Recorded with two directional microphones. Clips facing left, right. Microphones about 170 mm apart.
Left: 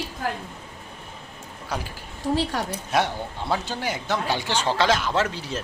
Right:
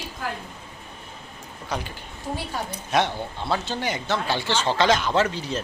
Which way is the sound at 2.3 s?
80° left.